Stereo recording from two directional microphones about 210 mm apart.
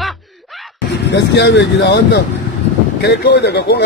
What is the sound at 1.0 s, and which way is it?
Speech, 55° left (ahead or behind).